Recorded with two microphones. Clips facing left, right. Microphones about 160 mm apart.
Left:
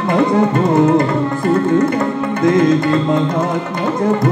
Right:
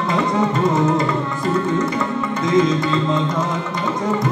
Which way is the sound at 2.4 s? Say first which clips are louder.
Left 5 dB; 55° left (ahead or behind).